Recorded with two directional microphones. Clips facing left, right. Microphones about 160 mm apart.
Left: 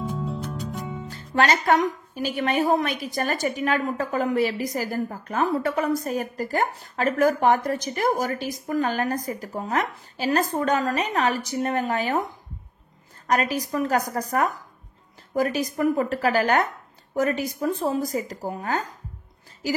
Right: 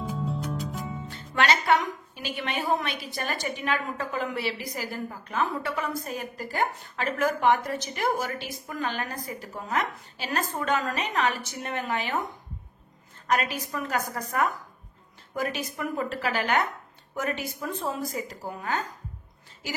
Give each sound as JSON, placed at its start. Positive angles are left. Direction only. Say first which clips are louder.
{"t": 0.0, "sound": "music", "louder": "left 2 dB", "side_deg": 0}
{"t": 1.1, "sound": "music", "louder": "left 3 dB", "side_deg": 40}
{"t": 2.1, "sound": "a woman's voice", "louder": "left 8 dB", "side_deg": 40}
{"t": 13.3, "sound": "a woman's voice", "louder": "left 4 dB", "side_deg": 40}